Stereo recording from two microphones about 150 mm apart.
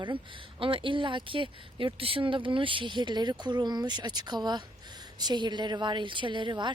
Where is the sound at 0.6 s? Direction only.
35° right (ahead or behind).